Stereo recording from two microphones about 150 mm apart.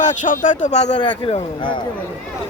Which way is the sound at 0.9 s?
30° left (ahead or behind).